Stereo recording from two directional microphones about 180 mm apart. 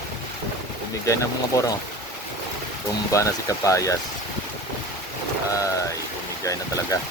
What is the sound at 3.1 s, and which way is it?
Speech, 15° left (ahead or behind).